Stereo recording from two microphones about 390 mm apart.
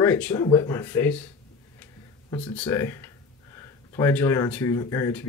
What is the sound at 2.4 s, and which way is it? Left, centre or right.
Speech, centre.